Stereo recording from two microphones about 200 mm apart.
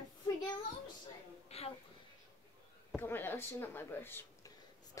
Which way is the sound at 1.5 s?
30° left (ahead or behind).